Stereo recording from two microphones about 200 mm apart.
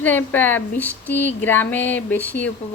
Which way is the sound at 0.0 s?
10° left (ahead or behind).